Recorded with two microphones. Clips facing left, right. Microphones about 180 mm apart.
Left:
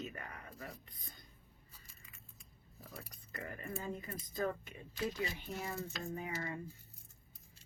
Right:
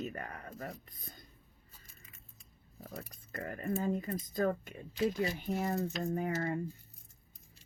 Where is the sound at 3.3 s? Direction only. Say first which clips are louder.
Right 8 dB; 45° right (ahead or behind).